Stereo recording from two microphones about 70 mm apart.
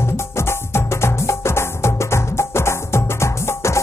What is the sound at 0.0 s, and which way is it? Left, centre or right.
Music, left.